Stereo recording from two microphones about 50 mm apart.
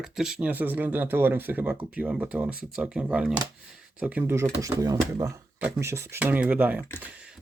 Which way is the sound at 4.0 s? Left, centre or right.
Right.